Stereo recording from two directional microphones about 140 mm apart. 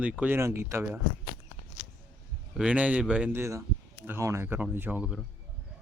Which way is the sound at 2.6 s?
10° right (ahead or behind).